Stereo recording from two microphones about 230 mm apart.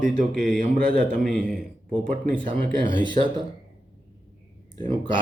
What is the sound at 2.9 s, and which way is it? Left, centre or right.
Speech, right.